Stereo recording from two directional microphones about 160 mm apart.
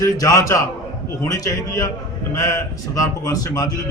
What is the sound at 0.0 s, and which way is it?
A man's voice, 20° left (ahead or behind).